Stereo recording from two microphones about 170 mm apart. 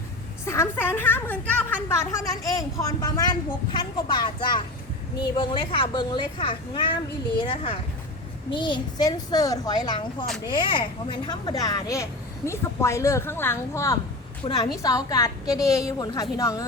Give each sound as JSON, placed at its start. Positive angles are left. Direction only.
{"t": 0.4, "sound": "a woman's voice", "side_deg": 15}